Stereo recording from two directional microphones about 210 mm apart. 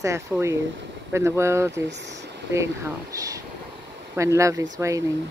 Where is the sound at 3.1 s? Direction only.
15° right (ahead or behind).